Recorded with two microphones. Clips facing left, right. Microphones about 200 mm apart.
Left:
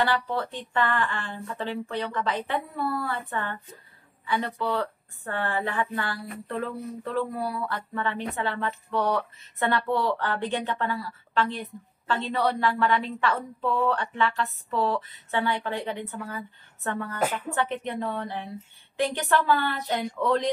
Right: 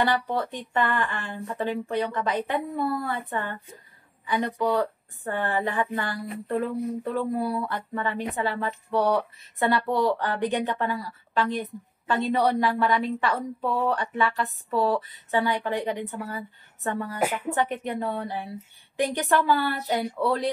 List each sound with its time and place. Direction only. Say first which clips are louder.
0.0 s a woman's voice: right 1 dB; 15° right (ahead or behind)